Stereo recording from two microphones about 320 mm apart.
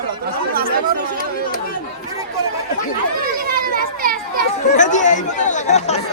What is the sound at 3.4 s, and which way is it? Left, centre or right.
Children playing, right.